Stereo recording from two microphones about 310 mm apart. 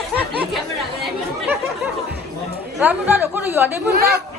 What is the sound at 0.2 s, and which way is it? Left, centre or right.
Chatter, centre.